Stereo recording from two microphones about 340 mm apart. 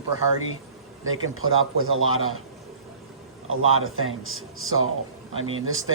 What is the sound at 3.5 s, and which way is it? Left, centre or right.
A man's voice, right.